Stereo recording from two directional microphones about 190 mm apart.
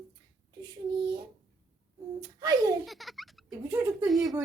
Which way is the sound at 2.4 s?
20° right (ahead or behind).